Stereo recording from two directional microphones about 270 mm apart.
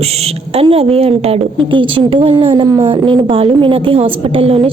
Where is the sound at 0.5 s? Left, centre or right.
Right.